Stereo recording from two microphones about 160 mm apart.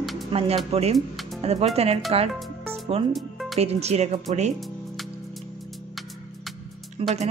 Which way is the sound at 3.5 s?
40° right (ahead or behind).